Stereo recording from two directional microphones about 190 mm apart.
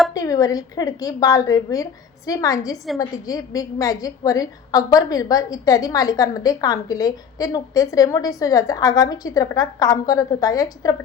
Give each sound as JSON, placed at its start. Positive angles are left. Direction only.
{"t": 0.1, "sound": "a woman's voice", "side_deg": 20}